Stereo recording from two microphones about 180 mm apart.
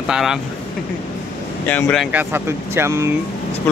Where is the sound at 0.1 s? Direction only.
Centre (ahead or behind).